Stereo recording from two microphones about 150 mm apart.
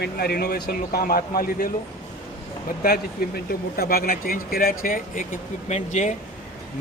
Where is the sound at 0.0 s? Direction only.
90° left; by 1.7 s 75° left (ahead or behind).